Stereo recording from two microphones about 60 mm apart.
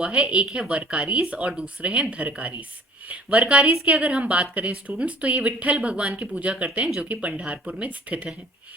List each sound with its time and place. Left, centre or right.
0.0 s a woman's voice: centre